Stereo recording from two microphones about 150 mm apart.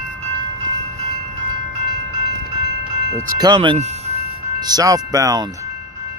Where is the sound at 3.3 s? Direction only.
30° right (ahead or behind).